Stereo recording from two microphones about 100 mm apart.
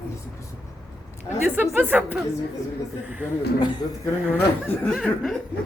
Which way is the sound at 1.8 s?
15° right (ahead or behind).